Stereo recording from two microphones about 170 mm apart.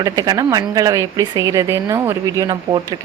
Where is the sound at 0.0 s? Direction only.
25° right (ahead or behind).